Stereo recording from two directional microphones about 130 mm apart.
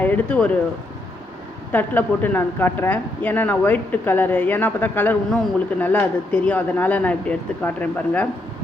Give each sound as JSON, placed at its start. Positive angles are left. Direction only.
{"t": 0.0, "sound": "speech", "side_deg": 10}
{"t": 1.7, "sound": "a woman's voice", "side_deg": 15}